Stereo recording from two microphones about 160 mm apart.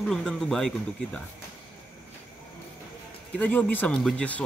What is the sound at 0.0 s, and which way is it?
Speech, centre (ahead or behind).